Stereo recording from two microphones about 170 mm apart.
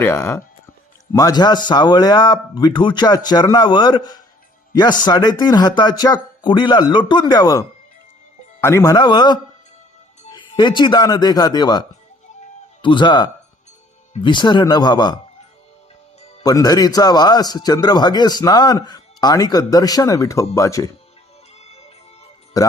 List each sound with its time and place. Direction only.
0.0 s a man's voice: 15° left (ahead or behind)
8.6 s a man's voice: 15° left (ahead or behind)
16.4 s a man's voice: 20° left (ahead or behind)
21.6 s music: 40° left (ahead or behind)
22.5 s speech: 20° left (ahead or behind)